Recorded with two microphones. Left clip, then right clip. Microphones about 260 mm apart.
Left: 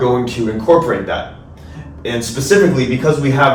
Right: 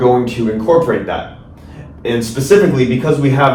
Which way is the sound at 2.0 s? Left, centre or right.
Centre.